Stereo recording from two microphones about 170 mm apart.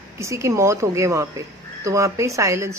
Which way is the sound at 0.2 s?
15° right (ahead or behind).